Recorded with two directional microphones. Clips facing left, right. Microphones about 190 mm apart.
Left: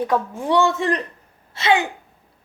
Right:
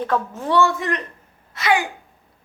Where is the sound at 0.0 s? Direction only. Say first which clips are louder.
Left 1 dB; 15° left (ahead or behind).